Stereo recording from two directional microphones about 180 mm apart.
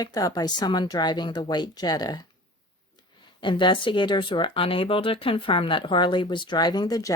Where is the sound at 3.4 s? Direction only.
25° left (ahead or behind).